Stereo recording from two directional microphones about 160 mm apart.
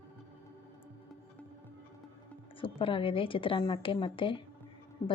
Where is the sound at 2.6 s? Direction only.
35° left (ahead or behind).